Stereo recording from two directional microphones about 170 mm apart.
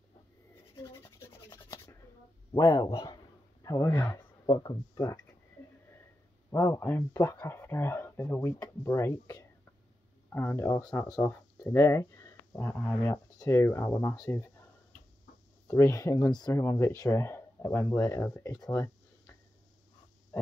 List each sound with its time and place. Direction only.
0.7 s rub: 15° left (ahead or behind)
2.5 s a man's voice: 20° left (ahead or behind)
6.5 s speech: 15° left (ahead or behind)
15.6 s speech: 15° left (ahead or behind)
18.7 s a sound: 15° left (ahead or behind)